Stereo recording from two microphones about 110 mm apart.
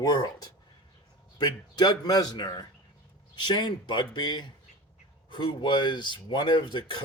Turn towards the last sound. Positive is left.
turn(degrees=45)  # may be behind; listen again after turning